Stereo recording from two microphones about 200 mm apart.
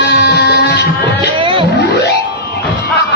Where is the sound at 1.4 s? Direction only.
25° right (ahead or behind).